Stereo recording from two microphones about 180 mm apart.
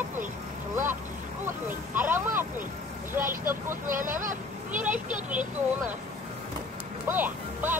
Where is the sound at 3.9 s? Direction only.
50° right (ahead or behind).